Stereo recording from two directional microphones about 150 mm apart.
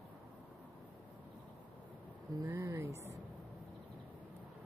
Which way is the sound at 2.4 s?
15° right (ahead or behind).